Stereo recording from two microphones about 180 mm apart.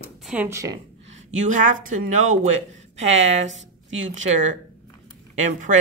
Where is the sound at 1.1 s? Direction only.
45° right (ahead or behind).